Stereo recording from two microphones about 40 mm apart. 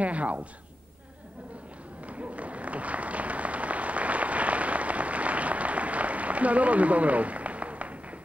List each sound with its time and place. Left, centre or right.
0.0 s a woman's voice: right
2.0 s applause: right